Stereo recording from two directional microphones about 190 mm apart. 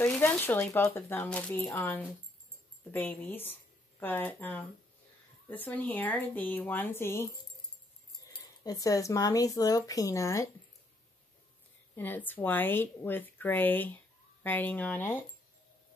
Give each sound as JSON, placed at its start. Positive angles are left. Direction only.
{"t": 0.0, "sound": "speech", "side_deg": 10}
{"t": 8.3, "sound": "speech", "side_deg": 20}
{"t": 11.9, "sound": "speech", "side_deg": 10}